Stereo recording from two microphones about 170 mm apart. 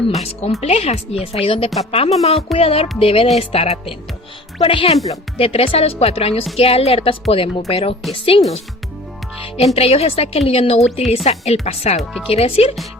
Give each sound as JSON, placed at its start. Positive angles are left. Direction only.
{"t": 0.1, "sound": "speech", "side_deg": 35}
{"t": 9.7, "sound": "speech", "side_deg": 35}
{"t": 11.9, "sound": "speech", "side_deg": 0}
{"t": 12.3, "sound": "speech", "side_deg": 35}